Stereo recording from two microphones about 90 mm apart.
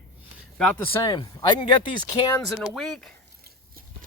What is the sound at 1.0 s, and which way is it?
Speech, 45° left (ahead or behind).